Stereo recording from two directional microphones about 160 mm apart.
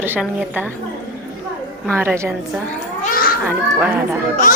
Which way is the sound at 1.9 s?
15° right (ahead or behind).